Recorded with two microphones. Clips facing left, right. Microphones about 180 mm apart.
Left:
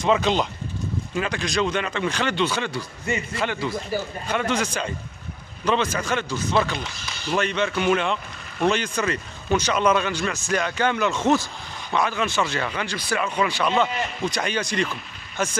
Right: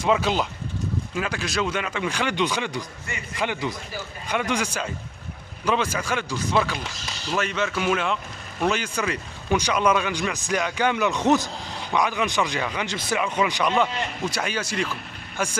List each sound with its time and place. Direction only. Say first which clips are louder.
0.0 s speech: left 1 dB; 5° right (ahead or behind)